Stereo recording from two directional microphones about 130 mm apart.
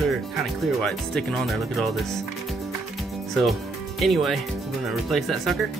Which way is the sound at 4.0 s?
Centre (ahead or behind).